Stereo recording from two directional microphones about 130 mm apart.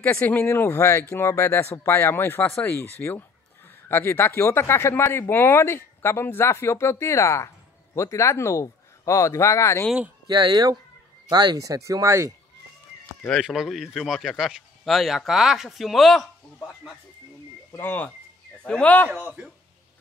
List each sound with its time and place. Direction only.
0.0 s speech: 15° left (ahead or behind)
10.2 s speech: 35° right (ahead or behind)
13.4 s speech: centre (ahead or behind)
17.7 s speech: 15° left (ahead or behind)